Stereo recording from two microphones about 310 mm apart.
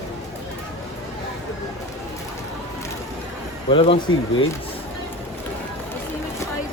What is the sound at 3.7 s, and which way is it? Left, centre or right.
Speech, centre.